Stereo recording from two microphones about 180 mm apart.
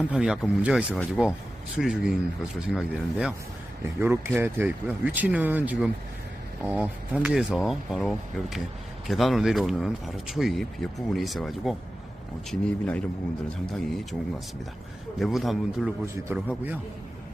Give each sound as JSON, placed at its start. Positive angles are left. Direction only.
{"t": 0.0, "sound": "speech", "side_deg": -5}
{"t": 3.8, "sound": "speech", "side_deg": -15}